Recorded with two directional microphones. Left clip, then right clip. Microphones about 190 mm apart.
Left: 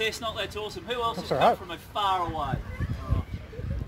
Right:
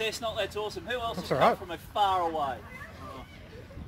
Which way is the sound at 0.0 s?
5° left (ahead or behind).